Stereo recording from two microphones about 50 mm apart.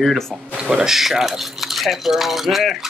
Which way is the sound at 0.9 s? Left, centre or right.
Centre.